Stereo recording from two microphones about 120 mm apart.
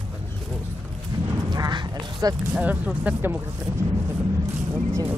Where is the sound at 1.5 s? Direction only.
35° right (ahead or behind).